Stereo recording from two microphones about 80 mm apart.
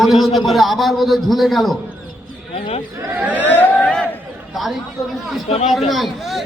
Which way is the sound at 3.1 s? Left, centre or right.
Right.